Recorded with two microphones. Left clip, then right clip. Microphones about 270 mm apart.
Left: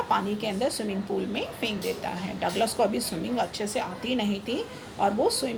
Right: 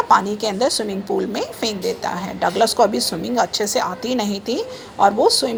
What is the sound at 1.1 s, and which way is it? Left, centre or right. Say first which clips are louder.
Speech: right 9 dB; right.